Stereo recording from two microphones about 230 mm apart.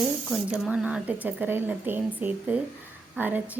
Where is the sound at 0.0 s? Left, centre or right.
Centre.